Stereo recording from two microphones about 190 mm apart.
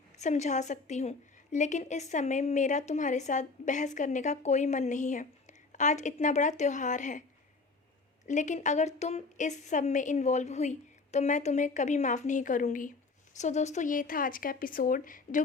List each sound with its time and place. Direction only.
0.2 s a woman's voice: 35° left (ahead or behind)
8.3 s a woman's voice: 40° left (ahead or behind)